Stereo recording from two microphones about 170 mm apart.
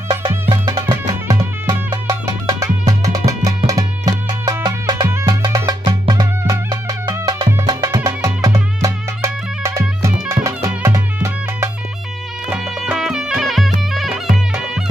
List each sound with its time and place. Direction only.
0.5 s music: 25° right (ahead or behind)
12.4 s music: 5° right (ahead or behind)